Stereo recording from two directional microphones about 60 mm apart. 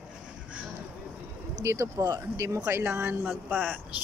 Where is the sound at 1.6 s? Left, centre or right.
Right.